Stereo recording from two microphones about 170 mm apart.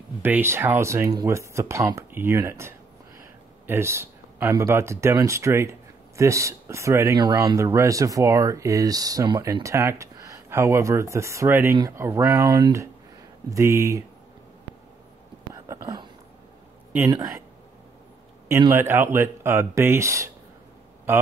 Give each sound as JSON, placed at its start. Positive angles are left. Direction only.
{"t": 0.2, "sound": "speech", "side_deg": -15}
{"t": 15.5, "sound": "whispering", "side_deg": -20}
{"t": 17.1, "sound": "speech", "side_deg": -20}
{"t": 18.6, "sound": "speech", "side_deg": -15}